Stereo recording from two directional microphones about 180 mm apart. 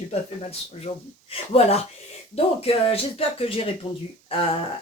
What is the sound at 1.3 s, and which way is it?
Speech, 35° left (ahead or behind).